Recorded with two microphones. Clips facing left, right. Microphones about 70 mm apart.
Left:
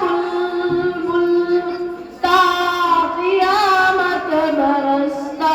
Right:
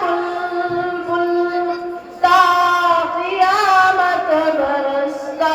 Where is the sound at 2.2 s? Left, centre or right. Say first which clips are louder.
Right 3 dB; centre.